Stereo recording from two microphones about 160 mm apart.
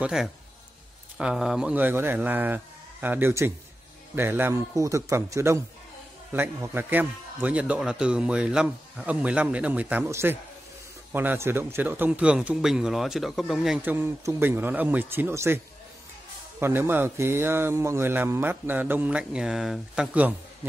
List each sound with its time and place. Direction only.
0.0 s a man's voice: 5° right (ahead or behind)